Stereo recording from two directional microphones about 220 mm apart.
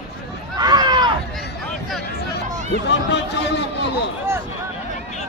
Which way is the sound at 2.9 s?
50° left (ahead or behind).